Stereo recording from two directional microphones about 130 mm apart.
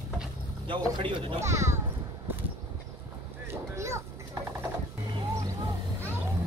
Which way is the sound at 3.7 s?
20° right (ahead or behind).